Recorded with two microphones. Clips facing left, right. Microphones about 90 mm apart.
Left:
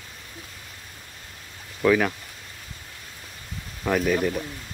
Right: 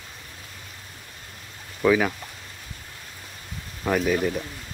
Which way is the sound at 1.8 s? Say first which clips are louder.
Even; 5° right (ahead or behind).